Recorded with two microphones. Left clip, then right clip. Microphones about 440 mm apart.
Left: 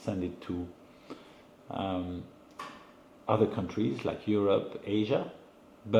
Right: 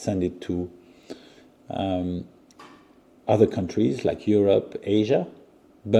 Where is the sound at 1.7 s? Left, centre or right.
Right.